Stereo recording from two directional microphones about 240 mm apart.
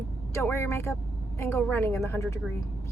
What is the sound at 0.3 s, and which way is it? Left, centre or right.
A woman's voice, centre.